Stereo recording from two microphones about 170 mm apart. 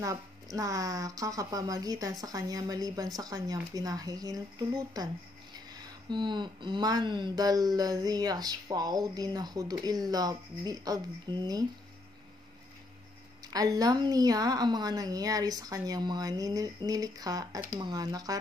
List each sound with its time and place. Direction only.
0.0 s speech: 20° right (ahead or behind)
13.5 s speech: 20° right (ahead or behind)